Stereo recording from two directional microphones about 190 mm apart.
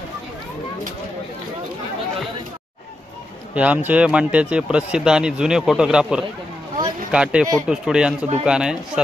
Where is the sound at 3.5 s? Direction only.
5° right (ahead or behind).